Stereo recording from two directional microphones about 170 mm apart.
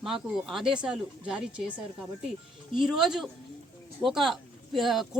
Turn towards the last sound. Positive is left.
turn(degrees=0)  # may be behind; listen again after turning